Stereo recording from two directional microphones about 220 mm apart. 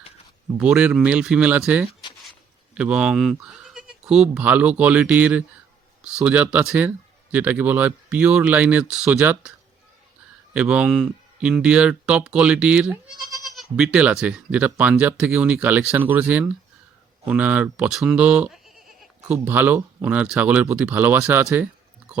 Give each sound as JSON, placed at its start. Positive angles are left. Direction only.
{"t": 0.5, "sound": "speech", "side_deg": -5}
{"t": 10.5, "sound": "speech", "side_deg": -5}